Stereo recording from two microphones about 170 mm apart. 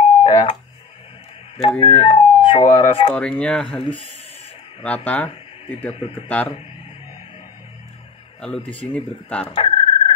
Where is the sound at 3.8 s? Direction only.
30° left (ahead or behind).